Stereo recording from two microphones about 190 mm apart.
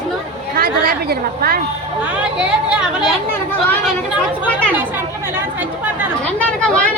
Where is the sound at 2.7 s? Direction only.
5° right (ahead or behind).